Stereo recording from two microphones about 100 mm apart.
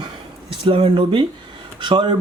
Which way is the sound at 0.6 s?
60° right (ahead or behind).